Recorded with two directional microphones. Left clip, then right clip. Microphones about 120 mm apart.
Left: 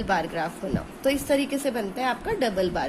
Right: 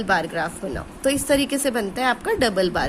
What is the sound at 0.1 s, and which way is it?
A woman's voice, 35° right (ahead or behind).